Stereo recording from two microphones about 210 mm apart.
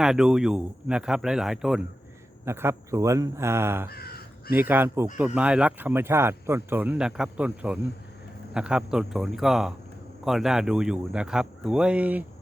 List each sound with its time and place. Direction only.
0.0 s speech: 5° right (ahead or behind)
3.8 s crow: 45° left (ahead or behind)
4.5 s speech: 10° right (ahead or behind)